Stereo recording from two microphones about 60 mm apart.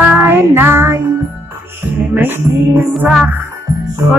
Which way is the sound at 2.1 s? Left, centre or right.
Right.